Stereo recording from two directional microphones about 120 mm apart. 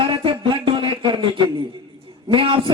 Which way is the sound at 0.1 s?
45° right (ahead or behind).